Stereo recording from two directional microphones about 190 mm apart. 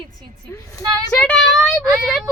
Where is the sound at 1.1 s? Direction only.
5° left (ahead or behind).